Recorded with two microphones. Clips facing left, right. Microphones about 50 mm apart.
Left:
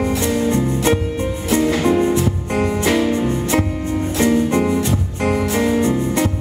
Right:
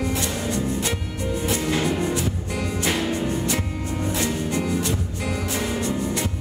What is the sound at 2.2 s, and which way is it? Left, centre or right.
Music, left.